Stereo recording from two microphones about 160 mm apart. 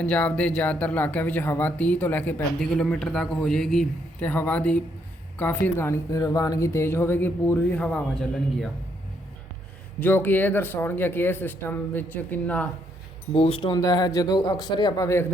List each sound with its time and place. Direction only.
0.0 s a man's voice: 10° left (ahead or behind)
10.0 s speech: 15° left (ahead or behind)
13.3 s speech: 35° left (ahead or behind); by 15.3 s 20° left (ahead or behind)